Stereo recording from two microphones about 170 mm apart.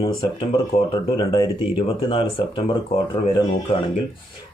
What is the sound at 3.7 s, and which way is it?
Speech, 35° left (ahead or behind).